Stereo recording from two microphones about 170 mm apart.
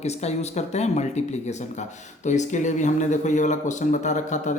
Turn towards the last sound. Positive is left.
turn(degrees=45)  # may be behind; listen again after turning